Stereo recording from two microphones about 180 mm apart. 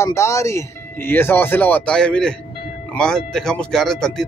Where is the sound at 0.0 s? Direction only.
15° left (ahead or behind).